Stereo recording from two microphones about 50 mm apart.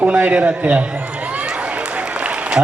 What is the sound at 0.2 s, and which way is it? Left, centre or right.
Speech, right.